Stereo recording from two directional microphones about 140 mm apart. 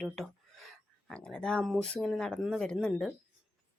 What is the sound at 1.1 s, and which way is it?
Speech, 5° left (ahead or behind).